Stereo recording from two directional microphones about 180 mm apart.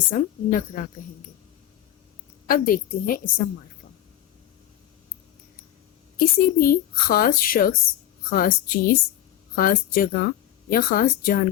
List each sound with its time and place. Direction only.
0.1 s speech: 50° left (ahead or behind)
2.5 s speech: 50° left (ahead or behind)
6.1 s speech: 55° left (ahead or behind)